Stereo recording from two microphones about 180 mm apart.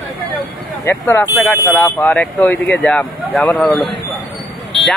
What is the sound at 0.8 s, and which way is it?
Speech, 15° left (ahead or behind).